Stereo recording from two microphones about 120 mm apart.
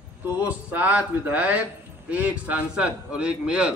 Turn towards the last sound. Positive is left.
turn(degrees=-5)  # may be behind; listen again after turning